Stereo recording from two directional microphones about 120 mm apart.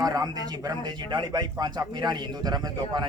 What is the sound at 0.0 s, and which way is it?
A man's voice, 30° right (ahead or behind).